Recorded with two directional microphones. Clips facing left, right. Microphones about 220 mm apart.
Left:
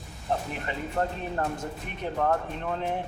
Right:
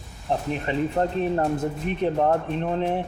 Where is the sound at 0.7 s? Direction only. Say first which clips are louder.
Right 6 dB; 20° right (ahead or behind).